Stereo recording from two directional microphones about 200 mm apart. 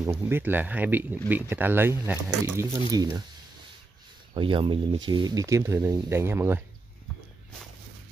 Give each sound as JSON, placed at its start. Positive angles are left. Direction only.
{"t": 0.0, "sound": "speech", "side_deg": -15}
{"t": 4.3, "sound": "speech", "side_deg": -25}